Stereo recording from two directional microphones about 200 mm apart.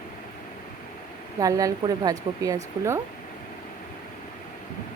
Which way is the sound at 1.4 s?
15° right (ahead or behind).